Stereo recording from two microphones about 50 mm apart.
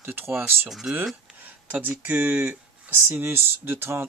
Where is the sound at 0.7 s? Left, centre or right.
Centre.